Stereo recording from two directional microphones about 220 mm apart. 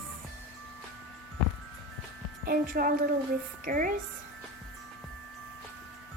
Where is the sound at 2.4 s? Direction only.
40° right (ahead or behind).